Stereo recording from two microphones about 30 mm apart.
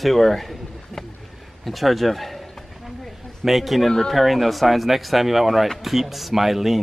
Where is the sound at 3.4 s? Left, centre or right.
Centre.